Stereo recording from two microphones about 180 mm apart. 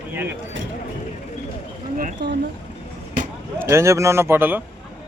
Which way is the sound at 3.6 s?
15° right (ahead or behind).